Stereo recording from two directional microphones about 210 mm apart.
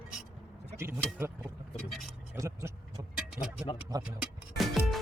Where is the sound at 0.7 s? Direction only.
10° right (ahead or behind).